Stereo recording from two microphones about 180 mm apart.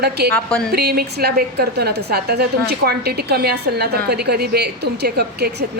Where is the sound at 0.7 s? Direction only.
60° right (ahead or behind).